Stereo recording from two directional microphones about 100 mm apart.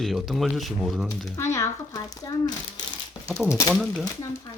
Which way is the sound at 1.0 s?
30° left (ahead or behind).